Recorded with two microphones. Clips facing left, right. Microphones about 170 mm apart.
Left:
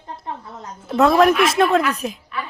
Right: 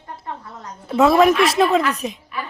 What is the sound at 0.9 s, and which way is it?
Speech, centre (ahead or behind).